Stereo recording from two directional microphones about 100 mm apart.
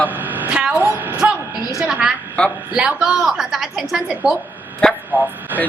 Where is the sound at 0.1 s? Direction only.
15° right (ahead or behind).